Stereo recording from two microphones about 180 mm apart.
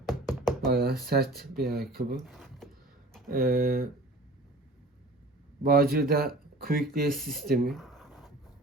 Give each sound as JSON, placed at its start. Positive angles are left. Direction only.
{"t": 0.0, "sound": "knock", "side_deg": 0}
{"t": 0.7, "sound": "speech", "side_deg": -60}
{"t": 2.1, "sound": "speech", "side_deg": 0}
{"t": 3.2, "sound": "speech", "side_deg": -55}
{"t": 5.6, "sound": "speech", "side_deg": -55}
{"t": 7.7, "sound": "a sound", "side_deg": 0}